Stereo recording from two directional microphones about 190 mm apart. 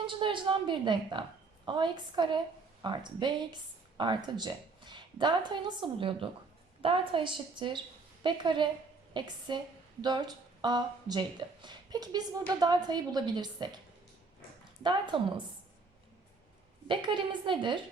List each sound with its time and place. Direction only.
0.0 s a woman's voice: 25° right (ahead or behind)
14.8 s speech: 25° right (ahead or behind)
16.9 s speech: 25° right (ahead or behind)